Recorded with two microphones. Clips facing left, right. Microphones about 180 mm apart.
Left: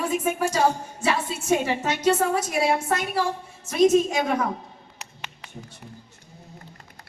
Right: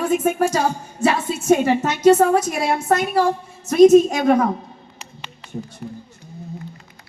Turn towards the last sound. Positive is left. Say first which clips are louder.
# right 11 dB
turn(degrees=5)  # may be behind; listen again after turning